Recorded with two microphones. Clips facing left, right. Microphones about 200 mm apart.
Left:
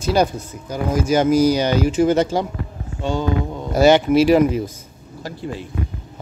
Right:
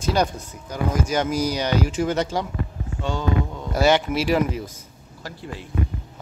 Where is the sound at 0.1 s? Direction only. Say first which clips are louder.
Left 5 dB; 5° left (ahead or behind).